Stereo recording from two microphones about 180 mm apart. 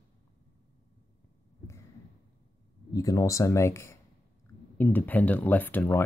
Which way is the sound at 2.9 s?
20° left (ahead or behind).